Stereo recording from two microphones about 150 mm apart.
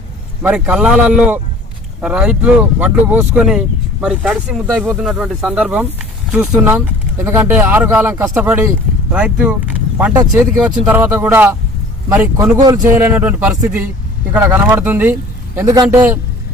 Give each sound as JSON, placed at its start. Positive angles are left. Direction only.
{"t": 0.4, "sound": "speech", "side_deg": -5}
{"t": 6.7, "sound": "speech", "side_deg": -15}
{"t": 10.2, "sound": "speech", "side_deg": -25}
{"t": 13.0, "sound": "speech", "side_deg": -10}
{"t": 15.5, "sound": "speech", "side_deg": -25}